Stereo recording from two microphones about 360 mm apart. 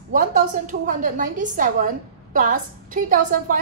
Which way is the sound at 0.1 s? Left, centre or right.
Right.